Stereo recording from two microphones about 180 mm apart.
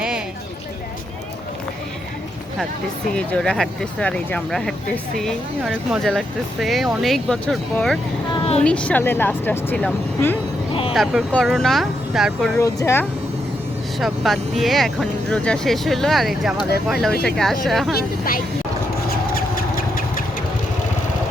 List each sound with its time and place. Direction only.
3.1 s speech: 5° left (ahead or behind)
5.7 s speech: centre (ahead or behind)
8.3 s a sound: 35° left (ahead or behind)
8.6 s speech: 5° left (ahead or behind)
12.5 s speech: 15° left (ahead or behind)
14.0 s speech: centre (ahead or behind)
17.9 s speech: 50° left (ahead or behind)
19.0 s a sound: 55° left (ahead or behind)